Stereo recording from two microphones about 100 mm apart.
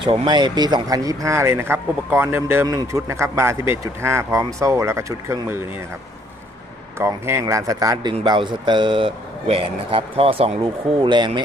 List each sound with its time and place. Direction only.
0.0 s speech: 50° right (ahead or behind); by 5.6 s 30° right (ahead or behind)
7.0 s speech: 25° right (ahead or behind)
8.2 s speech: 50° right (ahead or behind); by 10.5 s 70° right (ahead or behind)
10.6 s speech: 50° right (ahead or behind)